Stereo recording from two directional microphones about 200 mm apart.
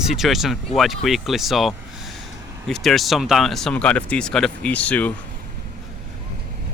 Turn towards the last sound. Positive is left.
turn(degrees=5)  # may be behind; listen again after turning